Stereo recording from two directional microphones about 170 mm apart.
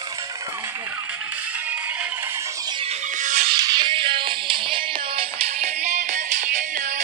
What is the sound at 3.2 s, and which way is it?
Music, 45° right (ahead or behind).